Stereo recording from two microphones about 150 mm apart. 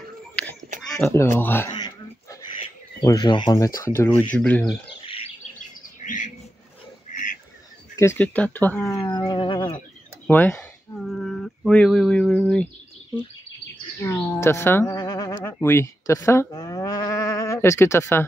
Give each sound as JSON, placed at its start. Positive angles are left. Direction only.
{"t": 0.7, "sound": "a sound", "side_deg": 0}
{"t": 1.4, "sound": "speech", "side_deg": 15}
{"t": 3.0, "sound": "speech", "side_deg": 25}
{"t": 3.5, "sound": "speech", "side_deg": 20}
{"t": 4.3, "sound": "speech", "side_deg": 10}
{"t": 5.0, "sound": "chirp", "side_deg": 40}
{"t": 5.9, "sound": "bird", "side_deg": 55}
{"t": 7.9, "sound": "speech", "side_deg": 15}
{"t": 10.2, "sound": "a sound", "side_deg": 10}
{"t": 14.0, "sound": "a sound", "side_deg": 15}
{"t": 15.4, "sound": "livestock", "side_deg": 15}